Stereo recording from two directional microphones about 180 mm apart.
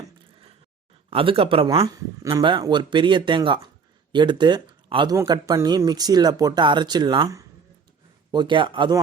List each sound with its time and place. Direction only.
1.1 s speech: 30° right (ahead or behind)